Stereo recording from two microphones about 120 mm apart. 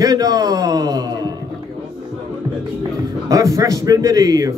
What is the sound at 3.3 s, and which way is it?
A man's voice, 30° right (ahead or behind).